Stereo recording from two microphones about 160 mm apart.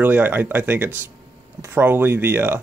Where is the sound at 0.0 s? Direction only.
10° right (ahead or behind).